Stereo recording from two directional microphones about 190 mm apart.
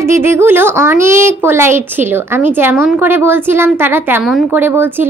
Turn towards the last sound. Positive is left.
turn(degrees=-10)  # may be behind; listen again after turning